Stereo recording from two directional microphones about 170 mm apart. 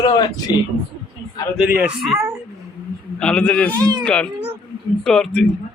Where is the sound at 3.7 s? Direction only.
25° right (ahead or behind).